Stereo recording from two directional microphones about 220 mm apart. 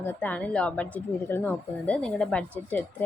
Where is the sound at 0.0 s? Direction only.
10° left (ahead or behind).